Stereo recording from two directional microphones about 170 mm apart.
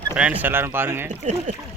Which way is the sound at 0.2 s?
10° right (ahead or behind).